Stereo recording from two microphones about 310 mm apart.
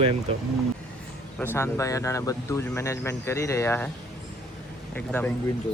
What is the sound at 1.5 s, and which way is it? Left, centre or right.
Speech, centre.